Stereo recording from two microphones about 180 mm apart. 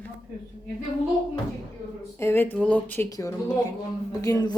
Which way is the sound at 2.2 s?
10° left (ahead or behind).